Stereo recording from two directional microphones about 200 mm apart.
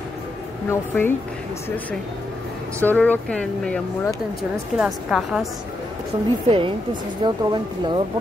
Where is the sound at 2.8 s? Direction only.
10° left (ahead or behind).